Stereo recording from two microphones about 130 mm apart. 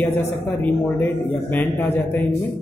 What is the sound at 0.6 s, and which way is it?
A man's voice, 15° left (ahead or behind).